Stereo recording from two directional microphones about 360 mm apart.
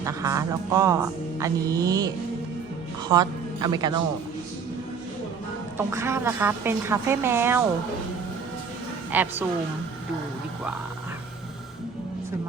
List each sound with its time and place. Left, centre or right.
0.0 s a woman's voice: centre
5.7 s a woman's voice: centre
9.1 s a woman's voice: centre